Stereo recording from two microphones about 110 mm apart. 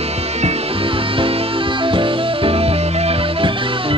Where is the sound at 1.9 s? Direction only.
55° right (ahead or behind).